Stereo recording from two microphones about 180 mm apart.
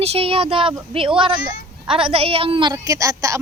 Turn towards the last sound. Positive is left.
turn(degrees=-15)  # may be behind; listen again after turning